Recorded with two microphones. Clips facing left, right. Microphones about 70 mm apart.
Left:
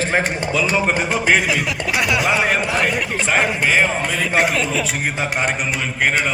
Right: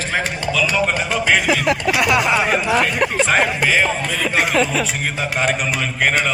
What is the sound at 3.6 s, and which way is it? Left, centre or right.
Speech, centre.